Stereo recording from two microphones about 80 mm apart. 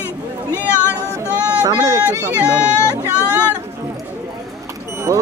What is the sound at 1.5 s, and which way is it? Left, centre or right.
Speech, right.